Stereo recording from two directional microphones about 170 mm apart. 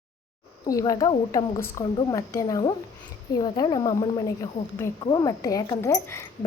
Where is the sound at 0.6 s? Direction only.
20° left (ahead or behind).